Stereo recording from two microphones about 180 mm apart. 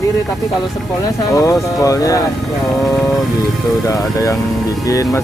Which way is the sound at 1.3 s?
15° left (ahead or behind).